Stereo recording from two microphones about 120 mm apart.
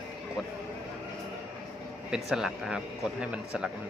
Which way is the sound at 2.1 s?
5° right (ahead or behind).